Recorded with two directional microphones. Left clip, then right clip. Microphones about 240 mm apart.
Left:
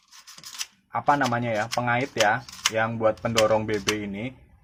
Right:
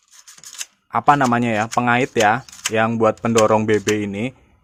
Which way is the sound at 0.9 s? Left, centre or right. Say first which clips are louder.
Right 7 dB; right.